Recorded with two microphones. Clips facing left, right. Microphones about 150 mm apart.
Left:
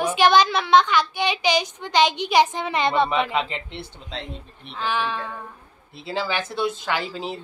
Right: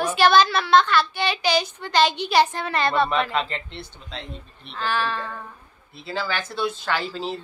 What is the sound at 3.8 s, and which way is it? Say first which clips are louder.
Speech: left 3 dB; 30° left (ahead or behind).